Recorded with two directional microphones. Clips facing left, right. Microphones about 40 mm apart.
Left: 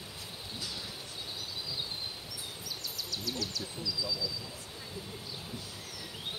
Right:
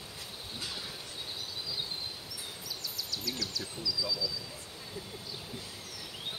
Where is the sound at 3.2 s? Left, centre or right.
Centre.